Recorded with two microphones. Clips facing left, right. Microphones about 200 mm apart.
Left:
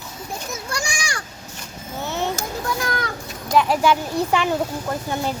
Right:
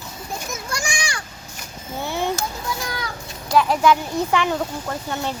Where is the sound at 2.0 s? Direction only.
15° right (ahead or behind).